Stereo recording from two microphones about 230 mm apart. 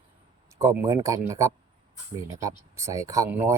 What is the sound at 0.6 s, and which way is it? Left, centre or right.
Speech, centre.